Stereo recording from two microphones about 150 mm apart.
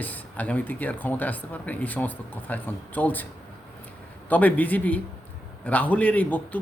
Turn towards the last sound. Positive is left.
turn(degrees=10)  # may be behind; listen again after turning